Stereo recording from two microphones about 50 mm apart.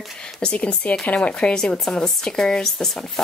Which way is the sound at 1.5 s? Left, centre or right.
Centre.